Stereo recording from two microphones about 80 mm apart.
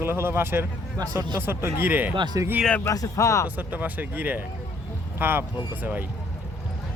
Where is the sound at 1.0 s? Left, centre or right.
Right.